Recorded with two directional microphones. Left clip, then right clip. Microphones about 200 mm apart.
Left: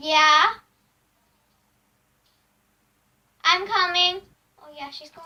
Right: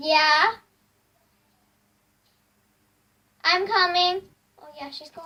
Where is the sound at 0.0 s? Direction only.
5° right (ahead or behind).